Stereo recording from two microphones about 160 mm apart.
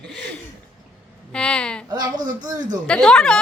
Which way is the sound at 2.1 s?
55° right (ahead or behind).